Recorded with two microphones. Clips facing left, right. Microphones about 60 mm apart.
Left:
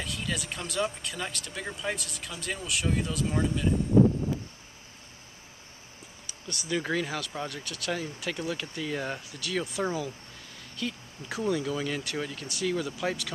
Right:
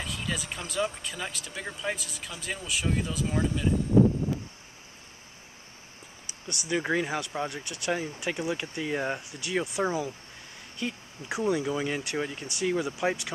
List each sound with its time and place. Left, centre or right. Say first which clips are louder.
0.0 s speech: even; centre
6.7 s speech: right 2 dB; centre